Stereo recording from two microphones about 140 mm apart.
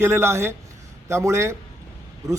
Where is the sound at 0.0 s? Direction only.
15° right (ahead or behind).